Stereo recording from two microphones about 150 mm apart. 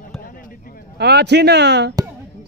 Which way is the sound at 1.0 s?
90° right.